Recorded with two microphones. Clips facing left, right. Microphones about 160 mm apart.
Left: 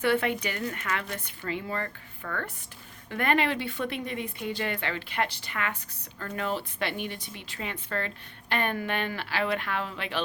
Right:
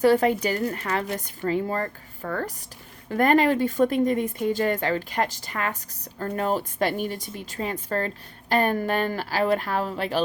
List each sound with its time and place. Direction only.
0.0 s a woman's voice: 40° right (ahead or behind)